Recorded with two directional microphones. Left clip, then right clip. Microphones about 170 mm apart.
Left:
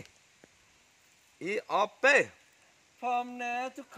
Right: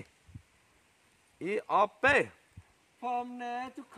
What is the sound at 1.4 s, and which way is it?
Speech, 60° right (ahead or behind).